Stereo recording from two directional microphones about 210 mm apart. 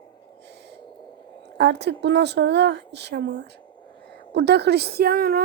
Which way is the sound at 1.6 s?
55° right (ahead or behind).